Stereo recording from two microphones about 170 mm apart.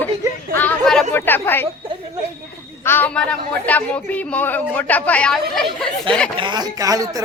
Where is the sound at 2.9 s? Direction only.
10° left (ahead or behind).